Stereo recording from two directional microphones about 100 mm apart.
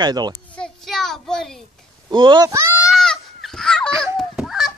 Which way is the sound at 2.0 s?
50° right (ahead or behind).